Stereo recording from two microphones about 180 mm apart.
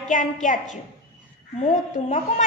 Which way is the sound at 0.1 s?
45° left (ahead or behind).